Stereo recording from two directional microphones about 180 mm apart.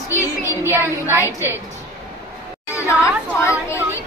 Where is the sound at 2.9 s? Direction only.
15° left (ahead or behind).